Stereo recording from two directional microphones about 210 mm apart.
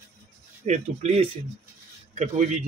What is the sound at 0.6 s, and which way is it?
Speech, 35° right (ahead or behind).